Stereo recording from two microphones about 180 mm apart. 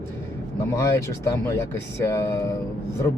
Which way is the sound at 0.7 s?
15° left (ahead or behind).